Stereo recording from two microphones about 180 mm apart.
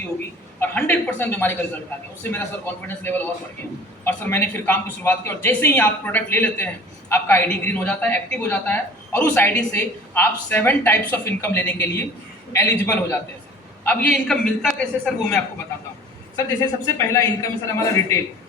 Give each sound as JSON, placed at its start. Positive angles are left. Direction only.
{"t": 0.6, "sound": "a woman's voice", "side_deg": 10}
{"t": 16.6, "sound": "a woman's voice", "side_deg": 15}